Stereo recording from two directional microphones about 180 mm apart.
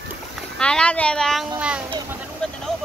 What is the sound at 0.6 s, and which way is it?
Speech, 5° left (ahead or behind).